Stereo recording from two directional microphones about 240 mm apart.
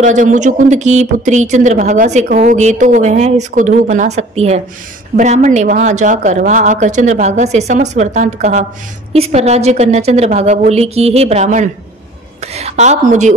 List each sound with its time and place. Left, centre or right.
0.0 s speech: right